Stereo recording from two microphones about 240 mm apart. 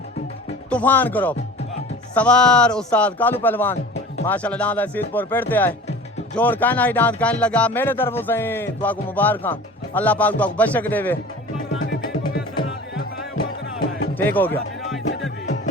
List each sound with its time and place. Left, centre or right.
0.7 s speech: centre
11.8 s music: left
14.2 s speech: centre